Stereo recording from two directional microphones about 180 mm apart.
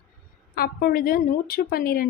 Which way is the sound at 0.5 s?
55° left (ahead or behind).